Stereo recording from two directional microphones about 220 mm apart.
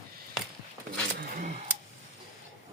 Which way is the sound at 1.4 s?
35° right (ahead or behind).